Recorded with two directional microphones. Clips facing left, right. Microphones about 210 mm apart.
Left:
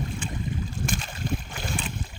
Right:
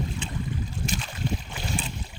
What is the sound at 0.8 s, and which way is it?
Boat, 50° left (ahead or behind).